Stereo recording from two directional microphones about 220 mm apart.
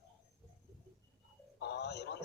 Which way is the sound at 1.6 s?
50° left (ahead or behind).